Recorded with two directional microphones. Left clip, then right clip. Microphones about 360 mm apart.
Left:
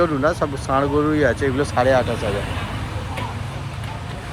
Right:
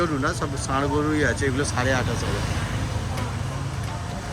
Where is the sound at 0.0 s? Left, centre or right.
Centre.